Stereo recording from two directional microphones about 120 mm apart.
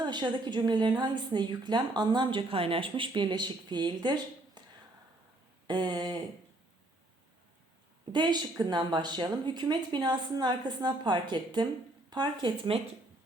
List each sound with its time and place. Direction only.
0.0 s a woman's voice: 40° right (ahead or behind)
5.6 s a woman's voice: 35° right (ahead or behind)
8.1 s a woman's voice: 40° right (ahead or behind)